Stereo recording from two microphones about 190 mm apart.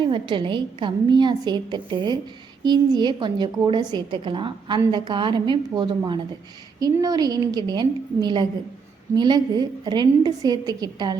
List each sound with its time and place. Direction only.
0.0 s a woman's voice: 25° right (ahead or behind)